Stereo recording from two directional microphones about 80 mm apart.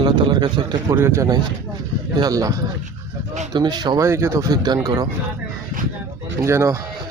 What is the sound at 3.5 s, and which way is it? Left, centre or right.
Speech, right.